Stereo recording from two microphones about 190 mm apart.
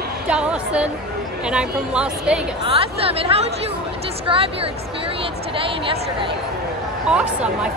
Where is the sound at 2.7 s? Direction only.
30° right (ahead or behind).